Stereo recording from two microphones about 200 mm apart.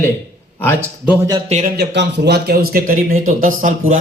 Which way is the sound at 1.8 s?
60° right (ahead or behind).